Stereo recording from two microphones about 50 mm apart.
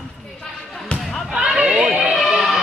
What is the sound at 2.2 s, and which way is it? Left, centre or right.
Music, centre.